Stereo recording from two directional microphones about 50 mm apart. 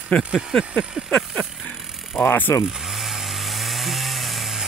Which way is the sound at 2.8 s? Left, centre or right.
Centre.